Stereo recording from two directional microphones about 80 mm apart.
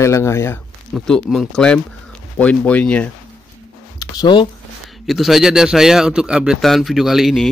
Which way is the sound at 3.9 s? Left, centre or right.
Left.